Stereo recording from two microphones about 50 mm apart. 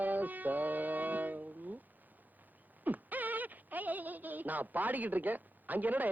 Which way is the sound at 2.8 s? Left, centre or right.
Right.